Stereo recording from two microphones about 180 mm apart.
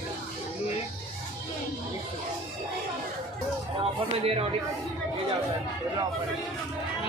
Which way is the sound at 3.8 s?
30° right (ahead or behind).